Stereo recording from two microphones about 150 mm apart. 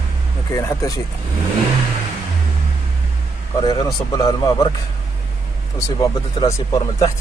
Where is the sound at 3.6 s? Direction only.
30° left (ahead or behind).